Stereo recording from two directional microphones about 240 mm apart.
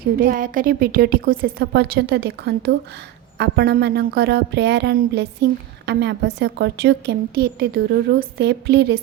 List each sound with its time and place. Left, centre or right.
0.0 s a woman's voice: right